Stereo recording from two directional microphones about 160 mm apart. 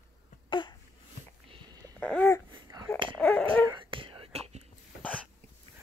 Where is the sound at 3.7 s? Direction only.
30° right (ahead or behind).